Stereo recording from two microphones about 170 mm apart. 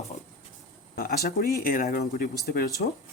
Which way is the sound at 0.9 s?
70° left (ahead or behind).